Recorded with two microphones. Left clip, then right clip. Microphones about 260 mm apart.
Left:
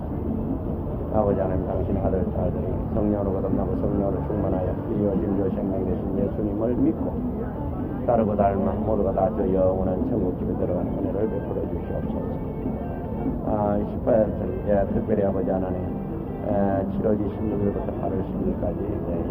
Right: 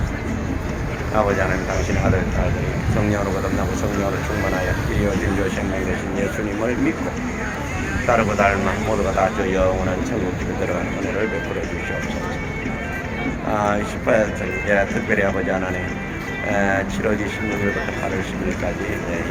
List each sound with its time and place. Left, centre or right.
1.1 s speech: right
8.0 s speech: right
13.5 s speech: right